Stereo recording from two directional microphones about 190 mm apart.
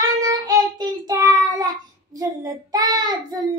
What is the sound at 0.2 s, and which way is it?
Child singing, 20° right (ahead or behind).